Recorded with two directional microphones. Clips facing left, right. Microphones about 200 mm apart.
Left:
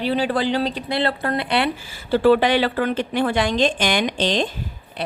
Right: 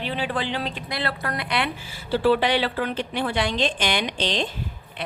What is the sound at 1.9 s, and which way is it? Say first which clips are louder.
A woman's voice: left 4 dB; 50° left (ahead or behind).